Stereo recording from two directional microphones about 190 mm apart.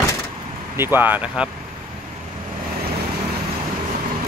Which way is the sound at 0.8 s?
10° right (ahead or behind).